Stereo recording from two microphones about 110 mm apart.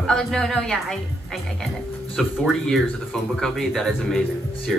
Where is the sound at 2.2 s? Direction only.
Centre (ahead or behind).